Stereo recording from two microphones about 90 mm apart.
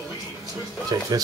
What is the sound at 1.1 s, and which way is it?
Speech, 45° right (ahead or behind).